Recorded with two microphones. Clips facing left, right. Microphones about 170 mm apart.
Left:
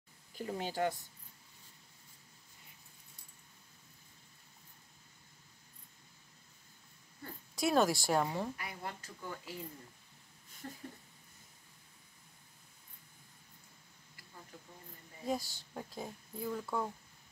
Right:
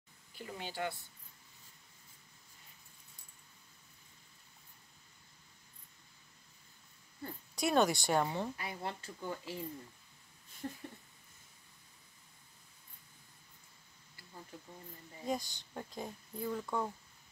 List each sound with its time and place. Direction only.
0.4 s speech: 40° left (ahead or behind)
7.5 s speech: centre (ahead or behind)
8.5 s speech: 25° right (ahead or behind)
10.6 s speech: 20° right (ahead or behind)
15.2 s speech: 5° left (ahead or behind)